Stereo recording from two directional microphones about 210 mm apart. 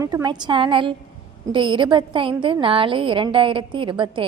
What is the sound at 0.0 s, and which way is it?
A woman's voice, 20° right (ahead or behind).